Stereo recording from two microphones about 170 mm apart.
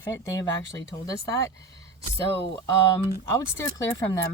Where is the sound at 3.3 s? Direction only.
15° left (ahead or behind).